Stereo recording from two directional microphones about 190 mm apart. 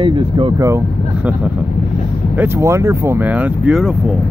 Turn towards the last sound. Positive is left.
turn(degrees=-5)  # may be behind; listen again after turning